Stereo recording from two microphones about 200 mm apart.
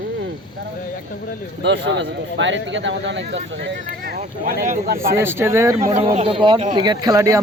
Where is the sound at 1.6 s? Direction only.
65° right (ahead or behind); by 5.1 s 45° right (ahead or behind).